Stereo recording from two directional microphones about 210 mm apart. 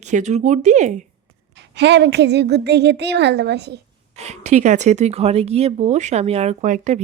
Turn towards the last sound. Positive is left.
turn(degrees=-35)  # may be behind; listen again after turning